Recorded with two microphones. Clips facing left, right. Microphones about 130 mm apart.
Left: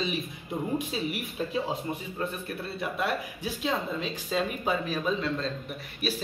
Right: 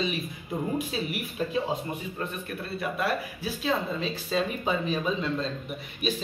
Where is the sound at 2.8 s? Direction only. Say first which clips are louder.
Right 1 dB; 20° left (ahead or behind).